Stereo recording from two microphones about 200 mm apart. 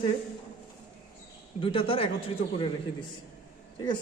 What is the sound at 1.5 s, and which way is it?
Speech, 25° left (ahead or behind).